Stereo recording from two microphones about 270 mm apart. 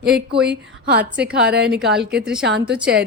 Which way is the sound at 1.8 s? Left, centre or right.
Centre.